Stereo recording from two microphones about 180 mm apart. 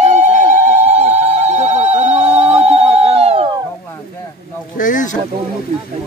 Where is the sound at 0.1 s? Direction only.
40° right (ahead or behind).